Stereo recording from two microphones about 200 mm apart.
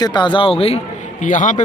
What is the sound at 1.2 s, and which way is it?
Speech, 40° left (ahead or behind).